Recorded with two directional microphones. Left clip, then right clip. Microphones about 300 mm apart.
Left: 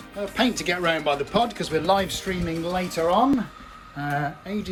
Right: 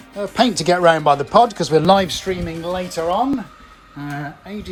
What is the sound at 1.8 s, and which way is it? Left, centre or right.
Speech, right.